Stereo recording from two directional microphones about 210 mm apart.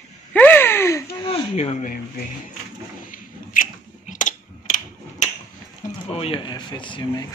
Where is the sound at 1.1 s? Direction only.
25° left (ahead or behind).